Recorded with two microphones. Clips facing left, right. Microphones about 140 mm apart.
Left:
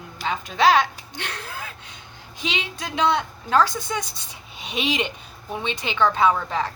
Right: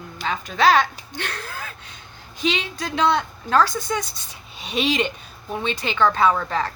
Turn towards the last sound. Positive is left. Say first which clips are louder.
# right 1 dB
turn(degrees=15)  # may be behind; listen again after turning